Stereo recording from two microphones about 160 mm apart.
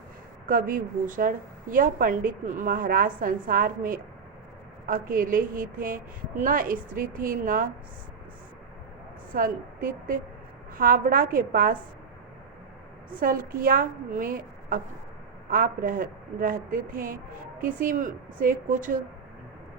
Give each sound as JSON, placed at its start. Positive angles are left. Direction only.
{"t": 0.4, "sound": "a woman's voice", "side_deg": -60}
{"t": 9.3, "sound": "a woman's voice", "side_deg": -60}
{"t": 13.1, "sound": "a woman's voice", "side_deg": -60}